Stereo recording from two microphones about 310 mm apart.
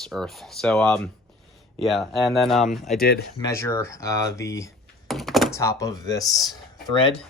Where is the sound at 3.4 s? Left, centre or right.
Centre.